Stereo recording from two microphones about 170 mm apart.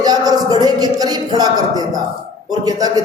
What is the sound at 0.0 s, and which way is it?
A woman's voice, 20° right (ahead or behind).